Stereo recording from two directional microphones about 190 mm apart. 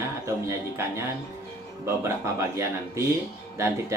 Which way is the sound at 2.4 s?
15° right (ahead or behind).